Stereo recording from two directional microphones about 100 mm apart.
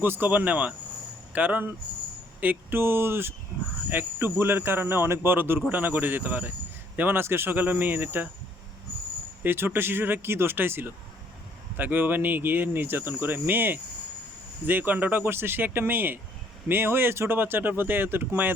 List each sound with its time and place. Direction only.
0.0 s speech: 20° right (ahead or behind)
9.4 s speech: 20° right (ahead or behind)